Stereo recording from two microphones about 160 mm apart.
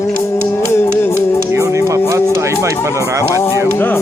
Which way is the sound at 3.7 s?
15° left (ahead or behind).